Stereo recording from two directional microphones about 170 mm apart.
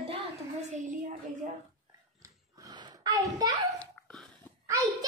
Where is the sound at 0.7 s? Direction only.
45° right (ahead or behind).